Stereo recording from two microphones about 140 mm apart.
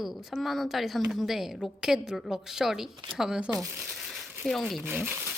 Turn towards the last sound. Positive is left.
turn(degrees=-15)  # may be behind; listen again after turning